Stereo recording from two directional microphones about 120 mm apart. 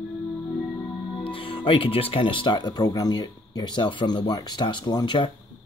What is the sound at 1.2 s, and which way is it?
Speech, 50° left (ahead or behind).